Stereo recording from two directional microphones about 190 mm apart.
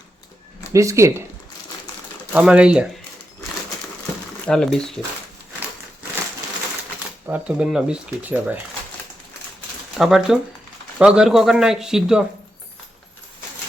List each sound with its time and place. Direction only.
0.7 s speech: 15° right (ahead or behind)
2.3 s speech: 5° right (ahead or behind)
4.4 s speech: 5° left (ahead or behind)
7.3 s speech: 5° right (ahead or behind)
10.0 s speech: centre (ahead or behind)